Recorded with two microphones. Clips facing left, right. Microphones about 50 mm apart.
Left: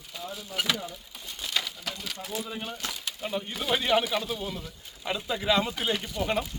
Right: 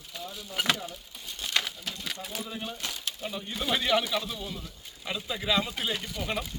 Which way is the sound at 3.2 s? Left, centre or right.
Left.